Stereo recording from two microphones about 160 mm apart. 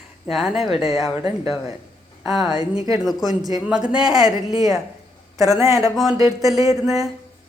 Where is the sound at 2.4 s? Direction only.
25° right (ahead or behind).